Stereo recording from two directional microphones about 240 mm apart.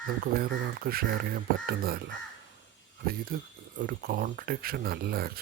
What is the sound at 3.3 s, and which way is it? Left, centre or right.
Speech, right.